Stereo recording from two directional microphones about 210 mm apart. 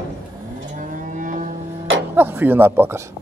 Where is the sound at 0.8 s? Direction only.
40° right (ahead or behind).